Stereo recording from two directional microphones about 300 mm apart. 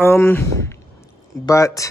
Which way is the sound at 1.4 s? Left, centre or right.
Centre.